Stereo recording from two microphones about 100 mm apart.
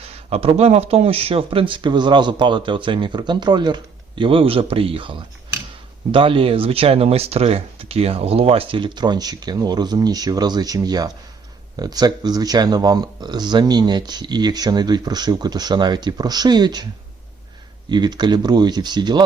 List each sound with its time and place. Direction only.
0.3 s speech: 85° right; by 16.8 s 45° right (ahead or behind)
17.8 s speech: 45° right (ahead or behind)